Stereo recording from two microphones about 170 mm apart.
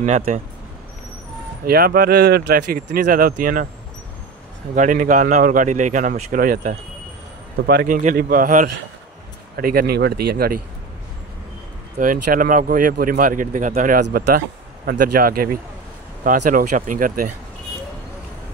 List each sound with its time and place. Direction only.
0.0 s speech: 45° right (ahead or behind)
1.7 s speech: 65° right (ahead or behind)
4.7 s speech: 50° right (ahead or behind)
12.0 s speech: 55° right (ahead or behind)
14.0 s speech: 65° right (ahead or behind)